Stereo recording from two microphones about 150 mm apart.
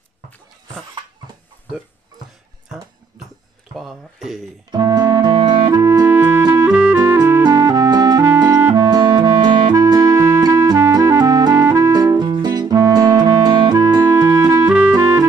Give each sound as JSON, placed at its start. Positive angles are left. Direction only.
{"t": 3.7, "sound": "a sound", "side_deg": 0}
{"t": 4.6, "sound": "music", "side_deg": -30}
{"t": 6.7, "sound": "music", "side_deg": -10}
{"t": 14.7, "sound": "music", "side_deg": -5}
{"t": 15.0, "sound": "music", "side_deg": -20}